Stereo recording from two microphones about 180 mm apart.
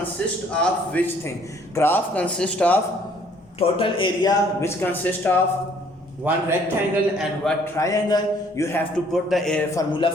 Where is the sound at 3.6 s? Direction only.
30° left (ahead or behind); by 5.3 s 10° left (ahead or behind).